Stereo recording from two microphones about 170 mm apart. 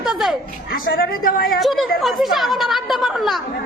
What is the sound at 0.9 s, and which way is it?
Speech, 60° left (ahead or behind).